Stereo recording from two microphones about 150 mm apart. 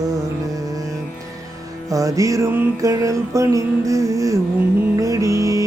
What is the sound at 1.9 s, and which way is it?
Music, 20° right (ahead or behind).